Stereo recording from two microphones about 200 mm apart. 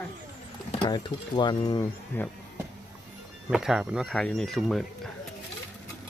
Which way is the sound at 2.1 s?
10° left (ahead or behind).